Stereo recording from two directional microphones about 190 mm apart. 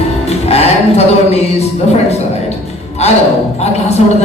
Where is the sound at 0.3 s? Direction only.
30° left (ahead or behind).